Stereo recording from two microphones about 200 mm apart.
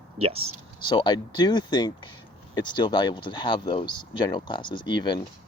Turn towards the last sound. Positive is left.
turn(degrees=20)  # may be behind; listen again after turning